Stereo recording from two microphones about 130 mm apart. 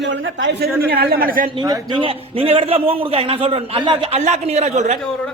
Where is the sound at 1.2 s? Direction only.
90° right.